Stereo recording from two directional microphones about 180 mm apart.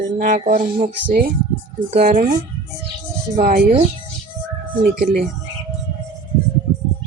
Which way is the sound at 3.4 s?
50° right (ahead or behind).